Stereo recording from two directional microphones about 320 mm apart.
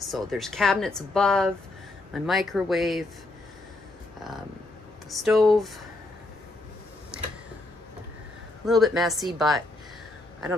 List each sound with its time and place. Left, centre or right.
0.1 s speech: centre
5.1 s speech: centre
8.6 s speech: centre